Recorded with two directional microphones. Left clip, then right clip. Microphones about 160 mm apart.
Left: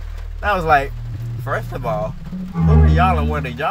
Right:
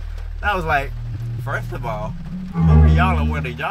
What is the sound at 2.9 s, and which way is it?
Speech, 20° left (ahead or behind).